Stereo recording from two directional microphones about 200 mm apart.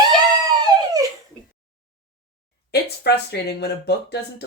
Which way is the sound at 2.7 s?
55° left (ahead or behind).